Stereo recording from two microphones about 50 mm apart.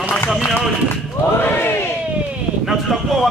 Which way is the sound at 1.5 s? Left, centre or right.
Left.